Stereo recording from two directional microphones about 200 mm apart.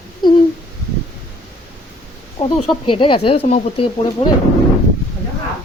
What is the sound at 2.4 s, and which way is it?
Speech, 30° left (ahead or behind).